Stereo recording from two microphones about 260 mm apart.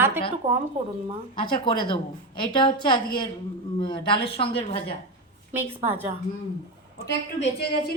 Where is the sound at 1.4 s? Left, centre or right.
Centre.